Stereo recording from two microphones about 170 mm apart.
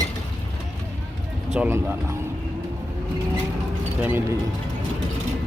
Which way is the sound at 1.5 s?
15° right (ahead or behind).